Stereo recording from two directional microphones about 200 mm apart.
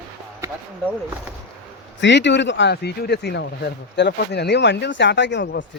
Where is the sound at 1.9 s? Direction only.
60° left (ahead or behind).